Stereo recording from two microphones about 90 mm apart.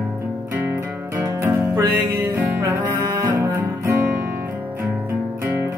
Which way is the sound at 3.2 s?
25° right (ahead or behind).